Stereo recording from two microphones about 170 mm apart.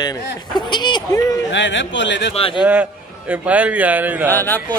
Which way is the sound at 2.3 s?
35° left (ahead or behind).